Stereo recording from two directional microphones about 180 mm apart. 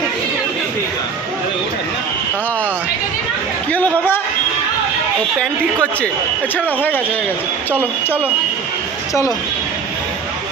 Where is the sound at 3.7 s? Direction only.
10° left (ahead or behind).